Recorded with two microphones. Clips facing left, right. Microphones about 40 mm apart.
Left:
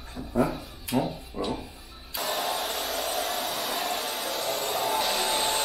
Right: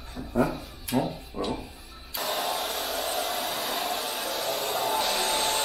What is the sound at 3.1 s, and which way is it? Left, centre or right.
Hair dryer, right.